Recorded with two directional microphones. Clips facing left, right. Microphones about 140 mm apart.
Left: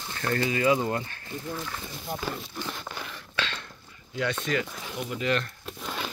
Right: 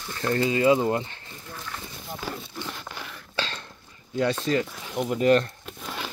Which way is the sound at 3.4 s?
35° right (ahead or behind).